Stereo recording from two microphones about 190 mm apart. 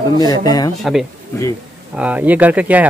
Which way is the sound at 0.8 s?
Centre (ahead or behind).